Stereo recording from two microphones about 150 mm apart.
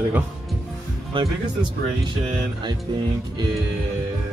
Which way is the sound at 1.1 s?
35° right (ahead or behind).